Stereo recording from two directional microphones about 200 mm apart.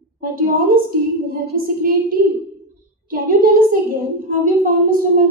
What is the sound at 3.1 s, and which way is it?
Speech, 45° right (ahead or behind).